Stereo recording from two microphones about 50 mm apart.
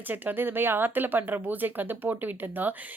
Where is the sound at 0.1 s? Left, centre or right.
Right.